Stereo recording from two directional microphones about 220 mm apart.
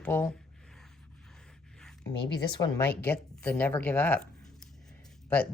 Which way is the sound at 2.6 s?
15° left (ahead or behind).